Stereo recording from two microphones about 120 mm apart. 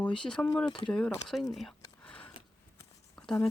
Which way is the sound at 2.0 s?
10° left (ahead or behind).